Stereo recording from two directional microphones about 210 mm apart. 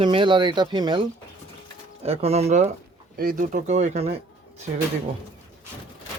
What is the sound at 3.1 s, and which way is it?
Speech, 40° right (ahead or behind).